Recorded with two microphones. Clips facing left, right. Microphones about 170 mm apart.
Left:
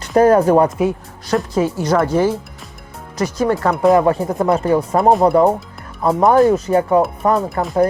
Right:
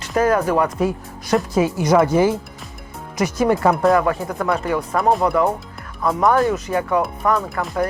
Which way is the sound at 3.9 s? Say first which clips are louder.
Left 5 dB; 25° left (ahead or behind).